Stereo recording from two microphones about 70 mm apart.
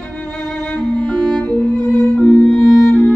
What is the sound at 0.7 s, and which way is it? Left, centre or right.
Music, centre.